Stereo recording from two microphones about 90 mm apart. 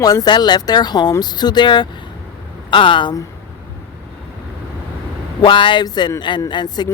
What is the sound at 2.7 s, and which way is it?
Speech, 65° left (ahead or behind).